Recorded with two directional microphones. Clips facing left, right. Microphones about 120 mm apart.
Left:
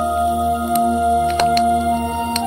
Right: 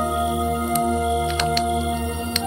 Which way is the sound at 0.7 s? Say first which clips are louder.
Left 6 dB; 50° left (ahead or behind).